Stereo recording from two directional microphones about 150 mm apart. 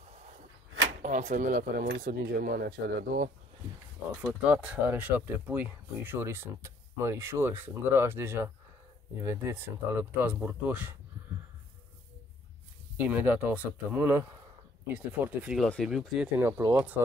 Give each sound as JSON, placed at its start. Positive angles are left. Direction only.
{"t": 1.0, "sound": "speech", "side_deg": -55}
{"t": 4.2, "sound": "speech", "side_deg": -10}
{"t": 12.9, "sound": "speech", "side_deg": -10}
{"t": 16.3, "sound": "speech", "side_deg": -15}